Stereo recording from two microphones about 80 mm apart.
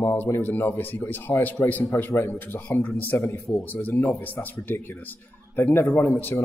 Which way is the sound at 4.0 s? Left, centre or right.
Left.